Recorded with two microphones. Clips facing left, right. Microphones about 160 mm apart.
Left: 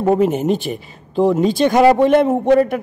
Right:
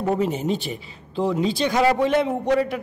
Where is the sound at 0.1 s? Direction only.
55° left (ahead or behind).